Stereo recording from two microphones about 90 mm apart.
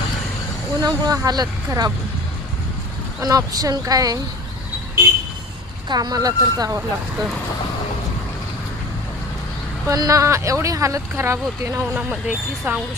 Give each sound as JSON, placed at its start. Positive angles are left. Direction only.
{"t": 0.8, "sound": "speech", "side_deg": -45}
{"t": 3.2, "sound": "speech", "side_deg": -40}
{"t": 5.9, "sound": "speech", "side_deg": -50}
{"t": 9.9, "sound": "speech", "side_deg": -40}
{"t": 11.9, "sound": "speech", "side_deg": -15}